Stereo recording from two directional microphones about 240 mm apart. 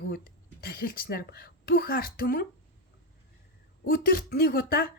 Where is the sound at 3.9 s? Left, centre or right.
Left.